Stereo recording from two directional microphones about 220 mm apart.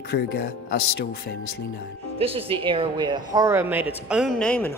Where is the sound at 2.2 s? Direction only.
25° right (ahead or behind).